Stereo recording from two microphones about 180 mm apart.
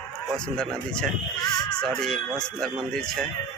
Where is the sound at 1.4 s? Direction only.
20° left (ahead or behind).